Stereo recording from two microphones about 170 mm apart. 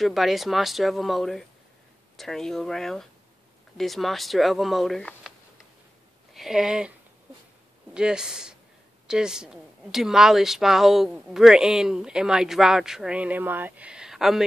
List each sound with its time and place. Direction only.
0.0 s a woman's voice: centre (ahead or behind)
6.3 s speech: centre (ahead or behind)
7.9 s a woman's voice: 5° right (ahead or behind)